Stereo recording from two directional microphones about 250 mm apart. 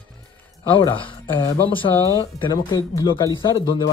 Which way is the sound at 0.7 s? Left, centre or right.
Left.